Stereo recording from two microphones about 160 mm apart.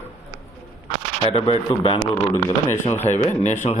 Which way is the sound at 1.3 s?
35° left (ahead or behind).